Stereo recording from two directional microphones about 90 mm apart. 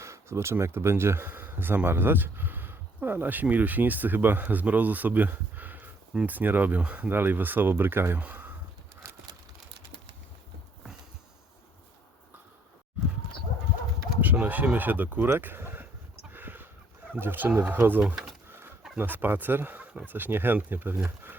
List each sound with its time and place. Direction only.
0.0 s speech: 30° right (ahead or behind)
9.0 s vehicle: 30° right (ahead or behind)
14.2 s speech: 20° right (ahead or behind)
16.3 s a sound: 25° right (ahead or behind)
17.1 s speech: 20° right (ahead or behind)
18.0 s speech: 5° right (ahead or behind)
18.4 s bird: 25° right (ahead or behind)
18.9 s speech: 20° right (ahead or behind)